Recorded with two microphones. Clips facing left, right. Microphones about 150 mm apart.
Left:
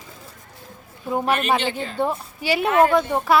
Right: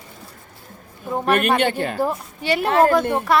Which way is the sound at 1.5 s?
60° right (ahead or behind).